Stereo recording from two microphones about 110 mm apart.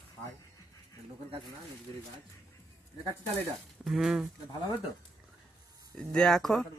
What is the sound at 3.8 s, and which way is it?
Speech, 5° right (ahead or behind).